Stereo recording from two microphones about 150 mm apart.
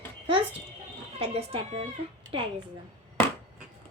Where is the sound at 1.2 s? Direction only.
40° right (ahead or behind).